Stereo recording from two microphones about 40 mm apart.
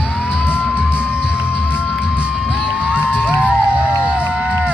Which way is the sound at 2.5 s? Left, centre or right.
Right.